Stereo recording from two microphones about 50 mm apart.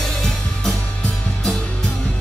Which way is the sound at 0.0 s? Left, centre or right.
Centre.